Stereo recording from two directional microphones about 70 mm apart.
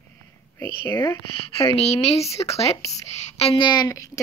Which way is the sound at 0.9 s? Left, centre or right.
Left.